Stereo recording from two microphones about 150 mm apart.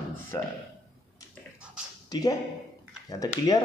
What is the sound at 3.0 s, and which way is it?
Speech, 25° left (ahead or behind).